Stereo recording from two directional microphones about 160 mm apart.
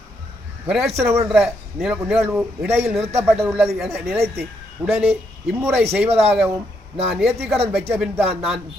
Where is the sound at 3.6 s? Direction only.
5° right (ahead or behind).